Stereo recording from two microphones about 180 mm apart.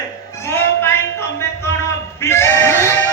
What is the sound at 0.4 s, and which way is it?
Music, 10° left (ahead or behind).